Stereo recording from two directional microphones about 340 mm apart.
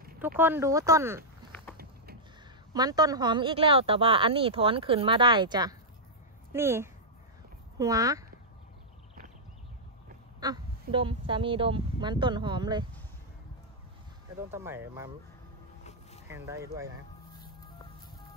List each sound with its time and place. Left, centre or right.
0.4 s speech: centre
2.7 s speech: centre
10.4 s speech: centre
14.5 s speech: centre
15.8 s a sound: centre
16.3 s speech: centre
17.3 s a sound: centre